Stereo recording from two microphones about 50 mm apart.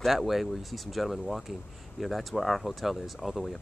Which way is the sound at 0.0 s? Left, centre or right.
Centre.